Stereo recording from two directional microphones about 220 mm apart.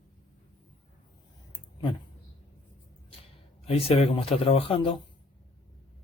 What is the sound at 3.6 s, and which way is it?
Speech, 25° left (ahead or behind).